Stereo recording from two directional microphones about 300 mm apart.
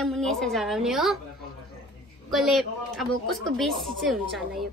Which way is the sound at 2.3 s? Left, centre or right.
Centre.